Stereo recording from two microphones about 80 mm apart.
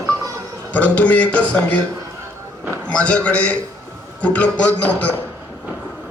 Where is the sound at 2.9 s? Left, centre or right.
Centre.